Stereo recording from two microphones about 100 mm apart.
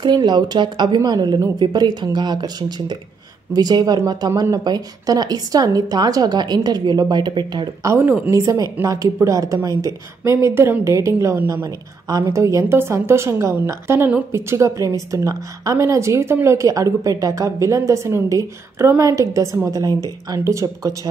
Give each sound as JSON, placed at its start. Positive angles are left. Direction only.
{"t": 0.0, "sound": "a woman's voice", "side_deg": -45}
{"t": 7.8, "sound": "a woman's voice", "side_deg": -25}